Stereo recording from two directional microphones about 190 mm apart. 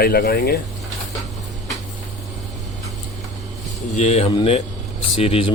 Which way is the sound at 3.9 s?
35° left (ahead or behind).